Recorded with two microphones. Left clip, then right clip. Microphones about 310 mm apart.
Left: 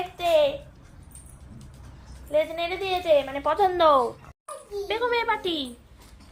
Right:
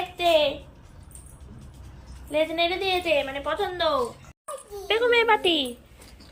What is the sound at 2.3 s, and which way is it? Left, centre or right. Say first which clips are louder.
A woman's voice: right 1 dB; left.